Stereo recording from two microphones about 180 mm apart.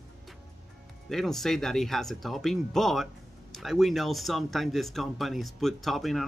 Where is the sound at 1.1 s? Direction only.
Centre (ahead or behind).